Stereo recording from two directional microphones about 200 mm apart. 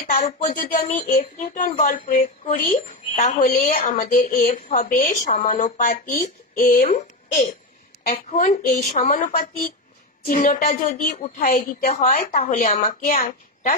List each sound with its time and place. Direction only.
0.0 s a woman's voice: 45° left (ahead or behind)